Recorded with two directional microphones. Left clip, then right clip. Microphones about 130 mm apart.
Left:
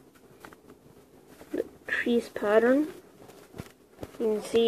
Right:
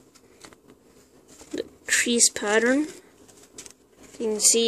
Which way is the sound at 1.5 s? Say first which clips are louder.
Right 5 dB; 35° right (ahead or behind).